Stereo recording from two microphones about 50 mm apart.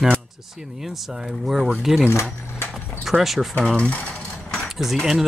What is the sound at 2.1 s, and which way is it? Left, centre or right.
Speech, left.